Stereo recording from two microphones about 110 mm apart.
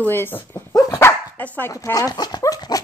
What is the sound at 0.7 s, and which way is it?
Dog, 35° left (ahead or behind).